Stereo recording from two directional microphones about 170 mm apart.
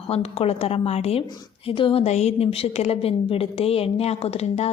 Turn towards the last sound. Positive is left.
turn(degrees=40)  # may be behind; listen again after turning